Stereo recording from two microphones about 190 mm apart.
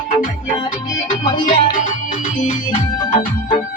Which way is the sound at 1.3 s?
45° left (ahead or behind).